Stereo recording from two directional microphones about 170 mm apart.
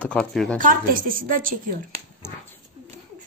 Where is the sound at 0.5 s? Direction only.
55° right (ahead or behind).